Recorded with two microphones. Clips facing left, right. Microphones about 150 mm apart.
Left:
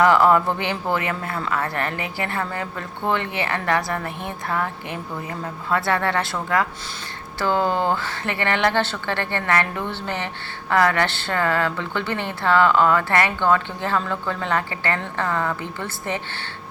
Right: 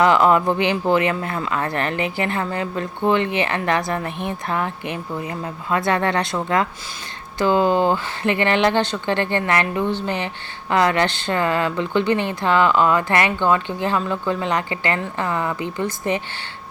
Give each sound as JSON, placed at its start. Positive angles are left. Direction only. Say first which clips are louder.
{"t": 0.0, "sound": "speech", "louder": "right 1 dB", "side_deg": -20}